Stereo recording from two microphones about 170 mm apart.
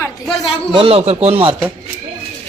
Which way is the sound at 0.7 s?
35° right (ahead or behind).